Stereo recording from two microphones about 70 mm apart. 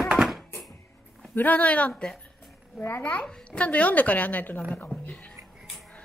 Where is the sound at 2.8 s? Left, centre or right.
Left.